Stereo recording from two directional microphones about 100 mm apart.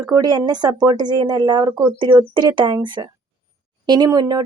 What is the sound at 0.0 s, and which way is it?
Speech, 40° right (ahead or behind).